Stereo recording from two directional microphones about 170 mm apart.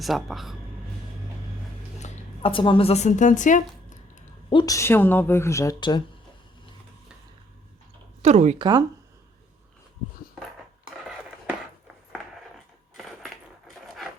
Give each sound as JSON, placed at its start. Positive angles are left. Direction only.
{"t": 0.0, "sound": "speech", "side_deg": 0}
{"t": 2.0, "sound": "a woman's voice", "side_deg": 40}
{"t": 4.4, "sound": "a woman's voice", "side_deg": 25}
{"t": 8.2, "sound": "speech", "side_deg": -40}
{"t": 10.8, "sound": "a sound", "side_deg": -5}
{"t": 13.0, "sound": "crushing", "side_deg": 0}
{"t": 13.8, "sound": "filing", "side_deg": 0}